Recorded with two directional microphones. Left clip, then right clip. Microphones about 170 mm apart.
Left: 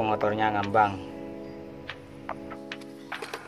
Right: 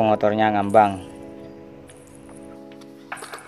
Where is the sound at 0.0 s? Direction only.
55° right (ahead or behind).